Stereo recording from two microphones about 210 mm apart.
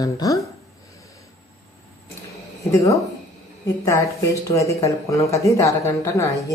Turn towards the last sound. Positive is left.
turn(degrees=15)  # may be behind; listen again after turning